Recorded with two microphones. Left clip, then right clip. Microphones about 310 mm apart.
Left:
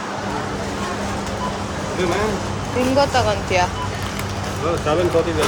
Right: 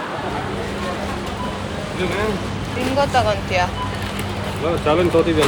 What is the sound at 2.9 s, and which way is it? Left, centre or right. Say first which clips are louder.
Speech: right 1 dB; centre.